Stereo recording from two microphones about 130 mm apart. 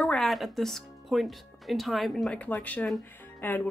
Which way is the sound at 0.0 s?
5° left (ahead or behind).